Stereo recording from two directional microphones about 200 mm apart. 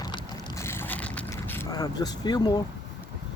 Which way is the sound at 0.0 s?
20° left (ahead or behind).